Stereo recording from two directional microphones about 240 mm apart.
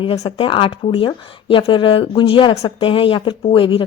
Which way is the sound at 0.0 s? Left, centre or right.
Left.